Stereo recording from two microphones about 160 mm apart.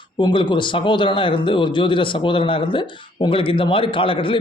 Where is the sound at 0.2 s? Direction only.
30° left (ahead or behind).